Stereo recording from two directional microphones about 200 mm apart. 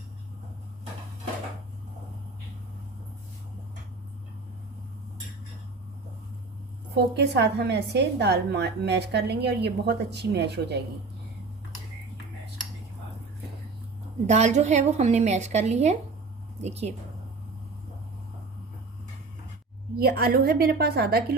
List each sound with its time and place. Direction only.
6.9 s a woman's voice: 55° right (ahead or behind)
14.3 s a woman's voice: 35° right (ahead or behind)
20.0 s a woman's voice: 50° right (ahead or behind)